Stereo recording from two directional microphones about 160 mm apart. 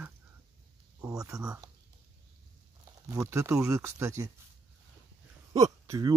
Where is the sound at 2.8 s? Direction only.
20° right (ahead or behind).